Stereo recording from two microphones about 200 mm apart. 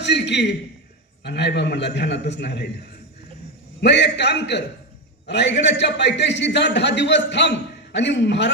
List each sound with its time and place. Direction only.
0.0 s a sound: 60° left (ahead or behind)
1.2 s a man's voice: 55° left (ahead or behind)
3.8 s a man's voice: 60° left (ahead or behind)